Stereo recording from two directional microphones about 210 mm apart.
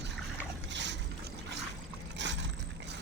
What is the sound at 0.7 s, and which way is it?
Mechanisms, 55° right (ahead or behind).